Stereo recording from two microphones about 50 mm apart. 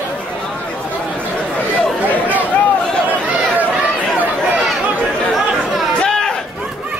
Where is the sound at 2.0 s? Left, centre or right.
Right.